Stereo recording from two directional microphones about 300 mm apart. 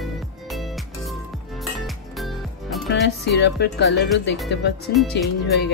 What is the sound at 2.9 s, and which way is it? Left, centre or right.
Music, left.